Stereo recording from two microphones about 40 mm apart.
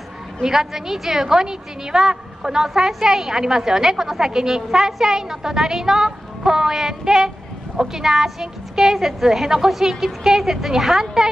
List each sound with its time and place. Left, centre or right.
0.4 s a woman's voice: centre